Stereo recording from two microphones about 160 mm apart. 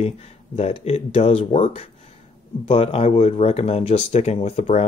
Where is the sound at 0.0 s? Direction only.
40° left (ahead or behind).